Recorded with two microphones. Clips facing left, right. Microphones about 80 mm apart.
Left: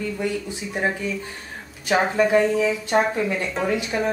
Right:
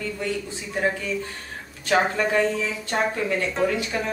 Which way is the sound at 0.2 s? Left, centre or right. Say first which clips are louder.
Left 2 dB; centre.